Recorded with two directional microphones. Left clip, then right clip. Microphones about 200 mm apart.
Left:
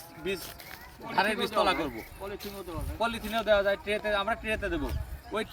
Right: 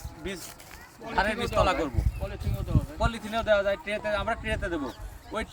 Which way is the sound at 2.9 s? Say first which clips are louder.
Even; 5° right (ahead or behind).